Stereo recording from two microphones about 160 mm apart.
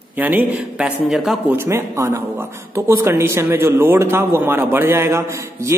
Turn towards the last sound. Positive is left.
turn(degrees=-20)  # may be behind; listen again after turning